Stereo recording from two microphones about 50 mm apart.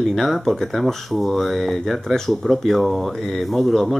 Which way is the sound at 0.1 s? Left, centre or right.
Centre.